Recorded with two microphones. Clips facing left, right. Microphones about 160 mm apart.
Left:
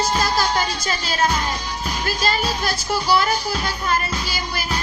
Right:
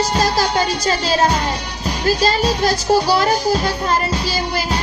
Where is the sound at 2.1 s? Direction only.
40° right (ahead or behind).